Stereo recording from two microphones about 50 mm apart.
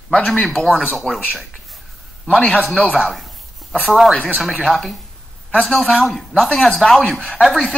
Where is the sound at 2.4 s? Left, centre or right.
Left.